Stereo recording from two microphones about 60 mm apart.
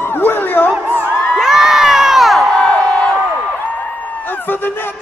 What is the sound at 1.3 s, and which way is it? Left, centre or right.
Crowd, centre.